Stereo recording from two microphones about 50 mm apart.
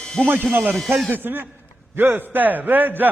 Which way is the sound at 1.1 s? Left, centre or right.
Right.